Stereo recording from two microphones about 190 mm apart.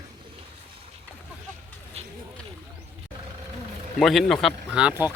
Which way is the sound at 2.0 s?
30° right (ahead or behind).